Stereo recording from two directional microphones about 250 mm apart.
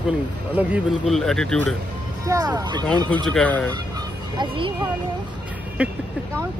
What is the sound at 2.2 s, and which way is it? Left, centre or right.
Speech, centre.